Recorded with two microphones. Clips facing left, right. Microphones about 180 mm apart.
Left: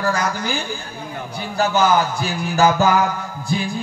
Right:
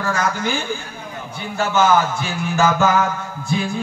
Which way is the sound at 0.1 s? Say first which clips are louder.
Right 1 dB; 35° left (ahead or behind).